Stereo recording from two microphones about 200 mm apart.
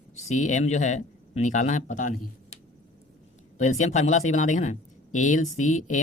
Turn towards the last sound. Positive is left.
turn(degrees=40)  # may be behind; listen again after turning